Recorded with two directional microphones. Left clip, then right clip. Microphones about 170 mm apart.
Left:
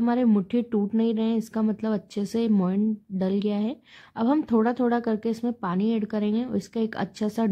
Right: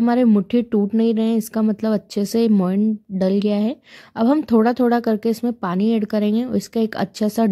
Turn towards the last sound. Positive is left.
turn(degrees=-35)  # may be behind; listen again after turning